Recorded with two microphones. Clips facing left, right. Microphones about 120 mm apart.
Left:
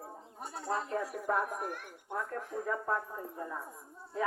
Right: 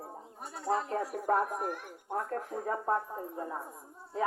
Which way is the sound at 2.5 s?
50° right (ahead or behind).